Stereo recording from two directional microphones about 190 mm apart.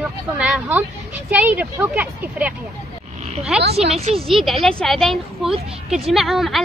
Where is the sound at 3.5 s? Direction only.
5° right (ahead or behind).